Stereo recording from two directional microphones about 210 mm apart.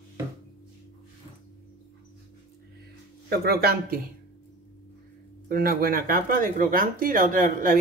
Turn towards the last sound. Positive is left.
turn(degrees=-40)  # may be behind; listen again after turning